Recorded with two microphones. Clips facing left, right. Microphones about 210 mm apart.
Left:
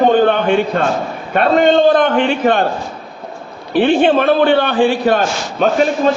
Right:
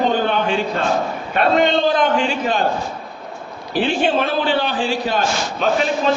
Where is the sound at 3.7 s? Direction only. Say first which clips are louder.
Left 7 dB; 60° left (ahead or behind).